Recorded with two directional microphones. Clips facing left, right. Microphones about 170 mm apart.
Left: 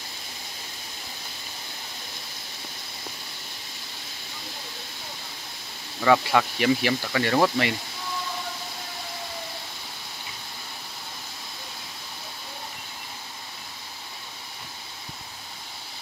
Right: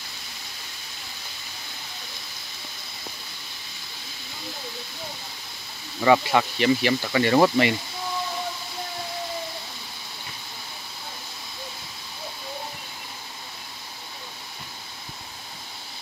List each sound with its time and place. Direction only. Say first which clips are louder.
5.9 s speech: right 1 dB; 10° right (ahead or behind)